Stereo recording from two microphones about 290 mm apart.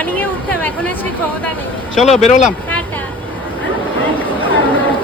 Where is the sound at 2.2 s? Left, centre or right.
Left.